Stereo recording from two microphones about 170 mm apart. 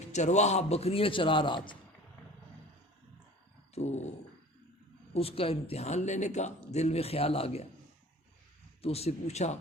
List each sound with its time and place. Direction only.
0.1 s speech: 45° left (ahead or behind)
3.8 s a sound: 40° left (ahead or behind)
5.1 s speech: 35° left (ahead or behind)
8.8 s speech: 35° left (ahead or behind)